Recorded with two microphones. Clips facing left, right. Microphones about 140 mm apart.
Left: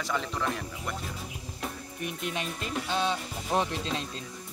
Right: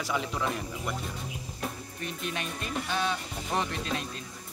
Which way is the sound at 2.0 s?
20° left (ahead or behind).